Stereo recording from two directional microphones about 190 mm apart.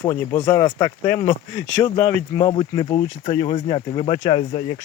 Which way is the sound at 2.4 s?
25° left (ahead or behind).